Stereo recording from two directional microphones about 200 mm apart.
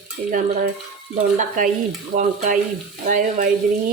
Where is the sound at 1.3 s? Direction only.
40° right (ahead or behind).